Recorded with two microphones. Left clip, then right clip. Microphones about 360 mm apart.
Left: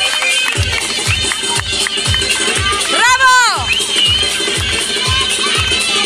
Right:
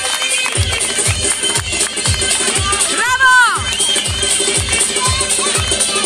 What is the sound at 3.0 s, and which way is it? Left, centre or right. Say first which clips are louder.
Music: left 1 dB; centre.